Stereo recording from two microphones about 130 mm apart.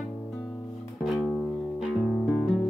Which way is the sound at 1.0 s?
Centre (ahead or behind).